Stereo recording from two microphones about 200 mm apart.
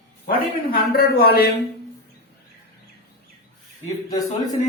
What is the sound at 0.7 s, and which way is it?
Speech, 50° left (ahead or behind).